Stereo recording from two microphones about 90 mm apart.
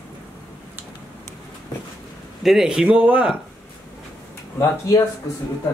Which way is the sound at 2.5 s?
5° right (ahead or behind).